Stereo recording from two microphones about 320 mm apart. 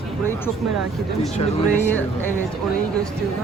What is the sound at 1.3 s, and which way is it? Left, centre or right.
Speech, left.